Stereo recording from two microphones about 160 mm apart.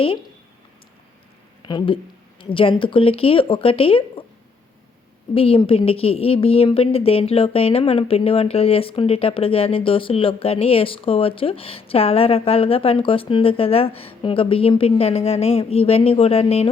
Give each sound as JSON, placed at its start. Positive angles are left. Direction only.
{"t": 1.6, "sound": "a woman's voice", "side_deg": 30}
{"t": 5.3, "sound": "a woman's voice", "side_deg": 35}